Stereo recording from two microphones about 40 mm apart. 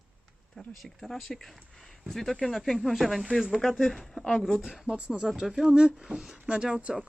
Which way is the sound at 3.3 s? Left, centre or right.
Centre.